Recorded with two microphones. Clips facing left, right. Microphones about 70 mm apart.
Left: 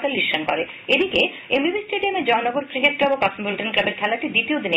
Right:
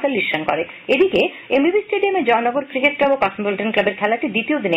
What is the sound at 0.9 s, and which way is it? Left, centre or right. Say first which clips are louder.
Speech: right 5 dB; right.